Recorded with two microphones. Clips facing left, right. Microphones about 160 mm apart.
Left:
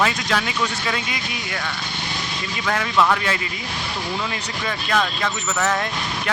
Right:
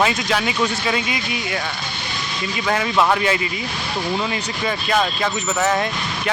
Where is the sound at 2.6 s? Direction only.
15° right (ahead or behind).